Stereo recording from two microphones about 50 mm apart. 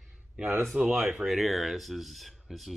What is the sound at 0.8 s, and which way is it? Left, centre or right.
Speech, right.